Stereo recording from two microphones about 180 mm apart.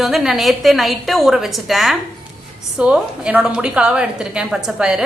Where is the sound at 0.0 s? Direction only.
Centre (ahead or behind).